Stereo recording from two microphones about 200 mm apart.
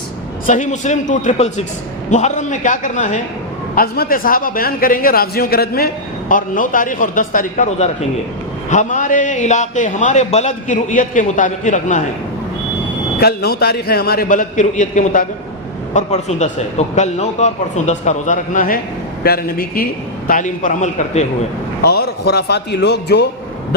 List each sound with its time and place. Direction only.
0.4 s a man's voice: 40° left (ahead or behind)
13.1 s a man's voice: 50° left (ahead or behind); by 21.2 s 35° left (ahead or behind)
21.8 s speech: 55° left (ahead or behind)